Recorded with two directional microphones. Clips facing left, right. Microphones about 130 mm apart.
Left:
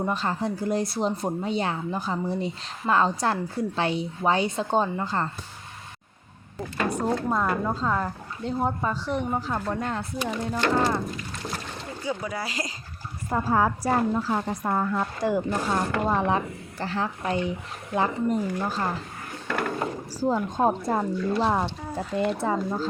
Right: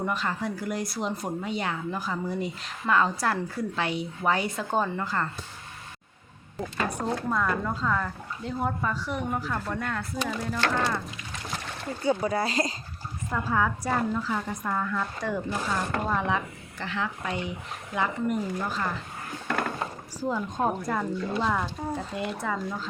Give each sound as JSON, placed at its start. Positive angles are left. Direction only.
{"t": 0.0, "sound": "speech", "side_deg": 30}
{"t": 7.3, "sound": "speech", "side_deg": 30}
{"t": 12.0, "sound": "speech", "side_deg": -30}
{"t": 13.3, "sound": "speech", "side_deg": 35}
{"t": 20.1, "sound": "speech", "side_deg": 30}